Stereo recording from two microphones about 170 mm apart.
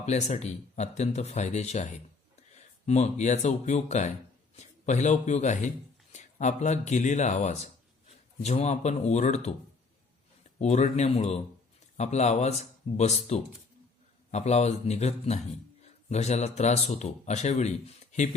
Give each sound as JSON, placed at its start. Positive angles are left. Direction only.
{"t": 0.0, "sound": "a man's voice", "side_deg": 40}
{"t": 10.6, "sound": "speech", "side_deg": 45}